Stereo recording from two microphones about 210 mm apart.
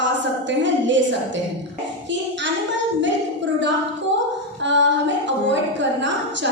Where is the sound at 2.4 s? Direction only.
60° right (ahead or behind).